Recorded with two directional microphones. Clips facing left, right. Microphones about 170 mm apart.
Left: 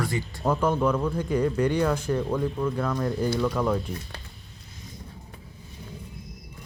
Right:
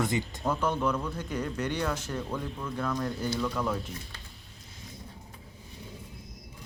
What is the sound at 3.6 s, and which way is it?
Speech, 25° left (ahead or behind).